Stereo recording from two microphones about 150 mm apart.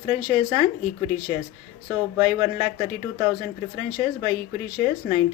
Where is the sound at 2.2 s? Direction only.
25° right (ahead or behind).